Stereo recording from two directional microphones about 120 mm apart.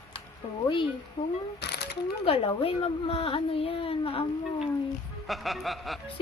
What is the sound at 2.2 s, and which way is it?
Speech, 50° left (ahead or behind).